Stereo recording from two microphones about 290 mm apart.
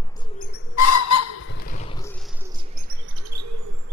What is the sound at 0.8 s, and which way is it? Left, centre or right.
Owl, left.